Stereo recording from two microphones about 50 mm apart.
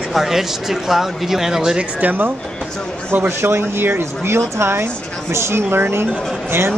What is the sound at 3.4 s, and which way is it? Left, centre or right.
Speech, right.